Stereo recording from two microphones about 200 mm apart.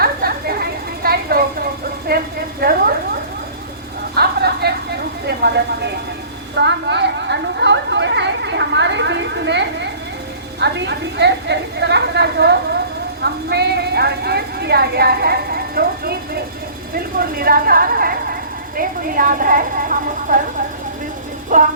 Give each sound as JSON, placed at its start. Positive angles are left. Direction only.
{"t": 0.0, "sound": "a sound", "side_deg": -50}
{"t": 4.1, "sound": "vehicle", "side_deg": -55}
{"t": 5.2, "sound": "a woman's voice", "side_deg": -55}
{"t": 16.9, "sound": "a sound", "side_deg": -50}
{"t": 18.8, "sound": "a woman's voice", "side_deg": -45}
{"t": 21.5, "sound": "child singing", "side_deg": -40}